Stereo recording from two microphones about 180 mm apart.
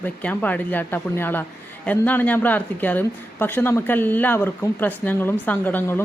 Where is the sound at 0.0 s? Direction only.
10° left (ahead or behind).